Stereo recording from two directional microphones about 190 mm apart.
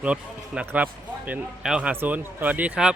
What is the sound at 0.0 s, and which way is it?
Speech, 5° right (ahead or behind).